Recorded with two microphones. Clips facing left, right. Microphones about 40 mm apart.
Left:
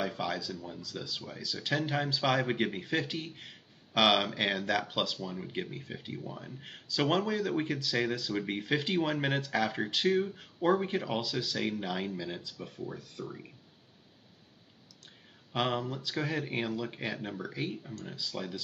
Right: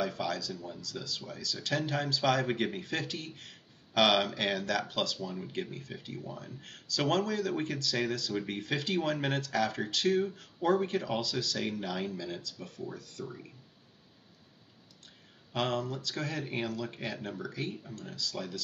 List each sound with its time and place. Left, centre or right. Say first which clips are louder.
0.0 s speech: even; centre
15.5 s speech: left 1 dB; centre